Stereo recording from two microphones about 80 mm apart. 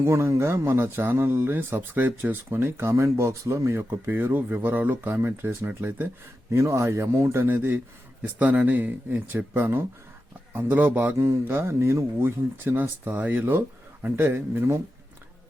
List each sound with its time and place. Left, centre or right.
0.0 s speech: right
6.5 s speech: right
11.2 s speech: right